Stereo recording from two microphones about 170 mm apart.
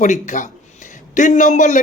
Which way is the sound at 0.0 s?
45° left (ahead or behind).